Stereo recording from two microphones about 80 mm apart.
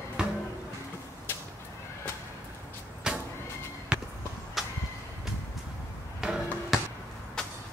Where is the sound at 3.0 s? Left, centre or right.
Centre.